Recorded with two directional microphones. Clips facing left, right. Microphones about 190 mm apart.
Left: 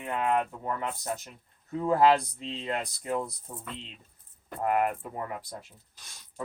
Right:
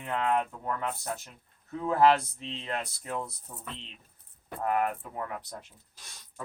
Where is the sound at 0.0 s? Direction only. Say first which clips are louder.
Left 1 dB; 15° left (ahead or behind).